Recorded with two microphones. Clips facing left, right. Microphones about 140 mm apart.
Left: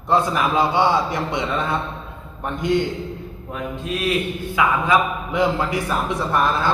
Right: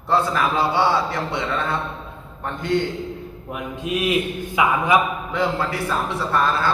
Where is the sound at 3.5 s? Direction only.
15° right (ahead or behind).